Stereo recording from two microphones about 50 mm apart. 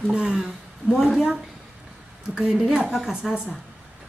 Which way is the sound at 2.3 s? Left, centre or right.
Centre.